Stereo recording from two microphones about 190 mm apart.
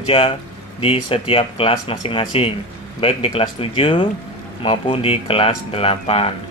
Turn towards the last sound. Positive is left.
turn(degrees=30)  # may be behind; listen again after turning